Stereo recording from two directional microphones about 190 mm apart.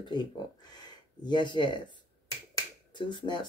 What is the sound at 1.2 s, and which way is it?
Speech, 25° left (ahead or behind).